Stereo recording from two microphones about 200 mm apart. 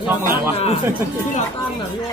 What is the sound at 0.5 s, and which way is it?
Speech, 30° left (ahead or behind).